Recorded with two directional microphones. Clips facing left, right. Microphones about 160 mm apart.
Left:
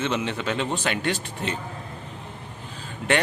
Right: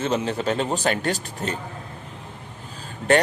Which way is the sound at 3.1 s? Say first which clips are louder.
Right 5 dB; 40° right (ahead or behind).